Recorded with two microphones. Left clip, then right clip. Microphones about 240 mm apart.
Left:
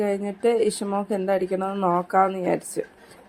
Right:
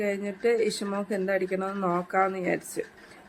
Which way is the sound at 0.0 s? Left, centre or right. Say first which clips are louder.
Left 4 dB; centre.